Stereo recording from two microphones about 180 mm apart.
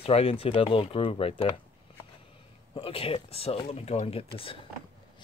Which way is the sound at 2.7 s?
30° left (ahead or behind).